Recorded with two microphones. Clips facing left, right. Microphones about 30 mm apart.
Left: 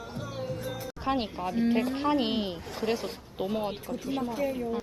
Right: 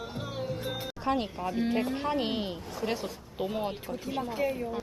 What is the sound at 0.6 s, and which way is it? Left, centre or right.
Music, right.